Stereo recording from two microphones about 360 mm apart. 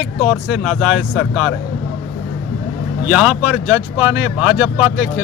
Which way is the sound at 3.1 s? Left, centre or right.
Centre.